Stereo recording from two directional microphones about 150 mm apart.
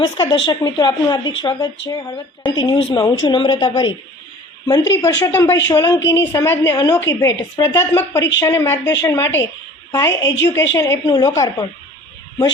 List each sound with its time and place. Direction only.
0.0 s a woman's voice: 30° left (ahead or behind)
4.7 s a woman's voice: 20° left (ahead or behind)